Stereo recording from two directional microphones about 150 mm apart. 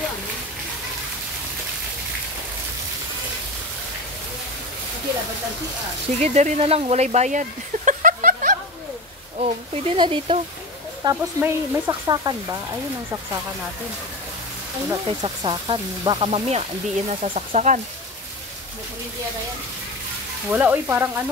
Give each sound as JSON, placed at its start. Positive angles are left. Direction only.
{"t": 6.1, "sound": "speech", "side_deg": -50}
{"t": 9.4, "sound": "speech", "side_deg": -35}
{"t": 11.1, "sound": "speech", "side_deg": -20}
{"t": 15.0, "sound": "speech", "side_deg": -35}
{"t": 20.4, "sound": "frying", "side_deg": -10}